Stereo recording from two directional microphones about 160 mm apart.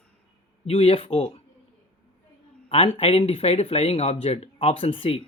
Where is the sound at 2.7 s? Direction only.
35° left (ahead or behind).